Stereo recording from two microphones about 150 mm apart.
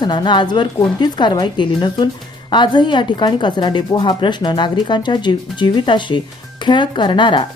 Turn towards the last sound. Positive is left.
turn(degrees=30)  # may be behind; listen again after turning